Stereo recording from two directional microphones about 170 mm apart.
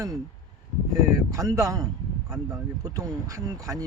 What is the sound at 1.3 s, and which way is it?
Speech, 20° right (ahead or behind).